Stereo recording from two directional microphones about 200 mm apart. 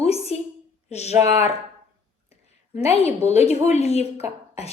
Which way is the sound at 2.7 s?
30° left (ahead or behind).